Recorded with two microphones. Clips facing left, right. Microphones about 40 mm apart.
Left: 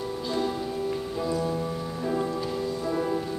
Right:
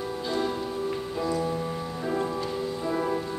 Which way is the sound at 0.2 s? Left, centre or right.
Centre.